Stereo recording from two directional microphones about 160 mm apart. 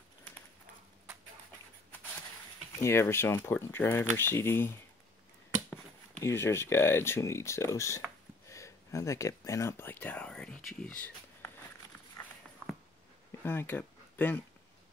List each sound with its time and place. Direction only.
2.8 s speech: 15° left (ahead or behind)
6.2 s speech: 15° left (ahead or behind)
12.2 s walk: 20° left (ahead or behind)
13.4 s speech: 15° left (ahead or behind)